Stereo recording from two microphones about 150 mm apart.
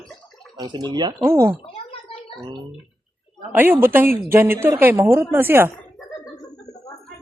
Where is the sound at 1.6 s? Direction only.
40° left (ahead or behind).